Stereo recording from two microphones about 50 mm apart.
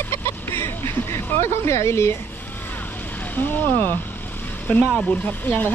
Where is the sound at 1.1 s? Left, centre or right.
Left.